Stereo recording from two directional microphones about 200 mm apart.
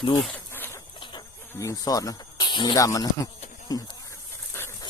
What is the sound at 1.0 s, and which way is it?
Cricket, 20° left (ahead or behind).